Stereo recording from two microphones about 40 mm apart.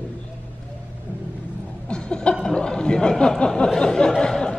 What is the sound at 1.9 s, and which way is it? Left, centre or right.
A man's voice, left.